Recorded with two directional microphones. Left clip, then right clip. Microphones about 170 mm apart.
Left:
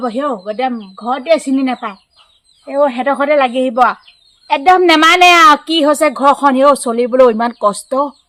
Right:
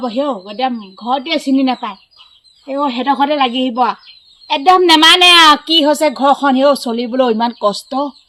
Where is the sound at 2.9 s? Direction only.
20° left (ahead or behind).